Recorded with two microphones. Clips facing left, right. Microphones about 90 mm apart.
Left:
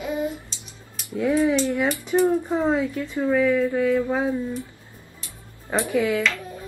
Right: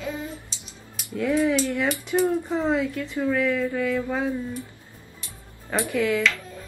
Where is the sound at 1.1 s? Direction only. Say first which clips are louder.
Left 2 dB; 20° left (ahead or behind).